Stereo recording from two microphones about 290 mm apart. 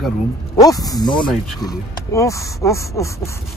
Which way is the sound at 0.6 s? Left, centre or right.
Centre.